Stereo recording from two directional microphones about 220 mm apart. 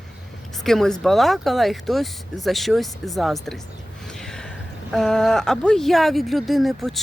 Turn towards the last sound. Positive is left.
turn(degrees=0)  # may be behind; listen again after turning